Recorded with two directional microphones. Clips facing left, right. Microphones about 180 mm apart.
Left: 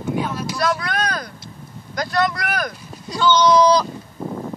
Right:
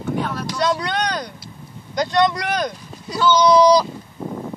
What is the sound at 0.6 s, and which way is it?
Vehicle, 20° right (ahead or behind).